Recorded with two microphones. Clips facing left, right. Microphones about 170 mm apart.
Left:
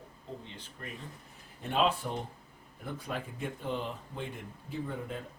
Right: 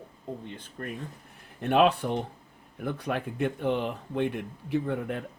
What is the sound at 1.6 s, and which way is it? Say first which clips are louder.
Speech: right 7 dB; 65° right (ahead or behind).